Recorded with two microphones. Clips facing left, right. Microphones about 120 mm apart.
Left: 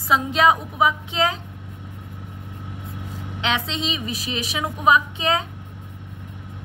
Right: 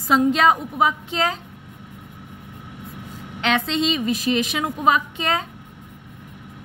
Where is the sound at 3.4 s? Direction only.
45° right (ahead or behind).